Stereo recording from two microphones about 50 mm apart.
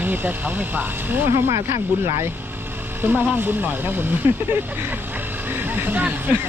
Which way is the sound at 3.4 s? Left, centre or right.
Right.